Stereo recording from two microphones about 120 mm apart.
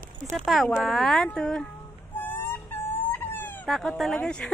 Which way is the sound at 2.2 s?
15° left (ahead or behind).